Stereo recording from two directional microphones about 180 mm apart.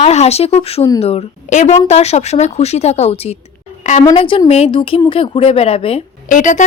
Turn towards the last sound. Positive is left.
turn(degrees=45)  # may be behind; listen again after turning